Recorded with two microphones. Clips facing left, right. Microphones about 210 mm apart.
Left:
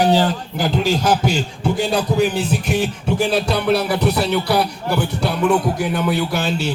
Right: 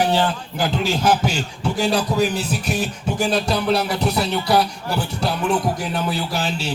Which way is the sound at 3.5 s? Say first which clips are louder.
Left 2 dB; 60° left (ahead or behind).